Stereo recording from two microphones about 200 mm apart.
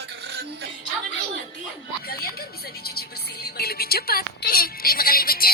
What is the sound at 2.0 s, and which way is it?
Speech, 50° left (ahead or behind).